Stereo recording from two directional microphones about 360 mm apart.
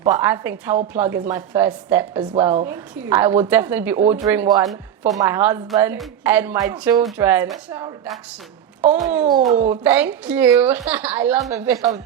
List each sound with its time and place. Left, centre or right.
0.1 s a woman's voice: centre
2.3 s a woman's voice: centre
2.6 s a woman's voice: centre
9.4 s speech: right
9.6 s a woman's voice: centre